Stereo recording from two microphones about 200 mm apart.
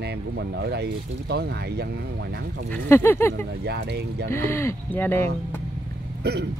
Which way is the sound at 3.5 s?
55° right (ahead or behind).